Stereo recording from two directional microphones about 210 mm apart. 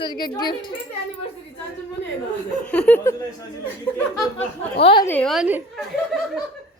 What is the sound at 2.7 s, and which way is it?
Speech, 5° left (ahead or behind).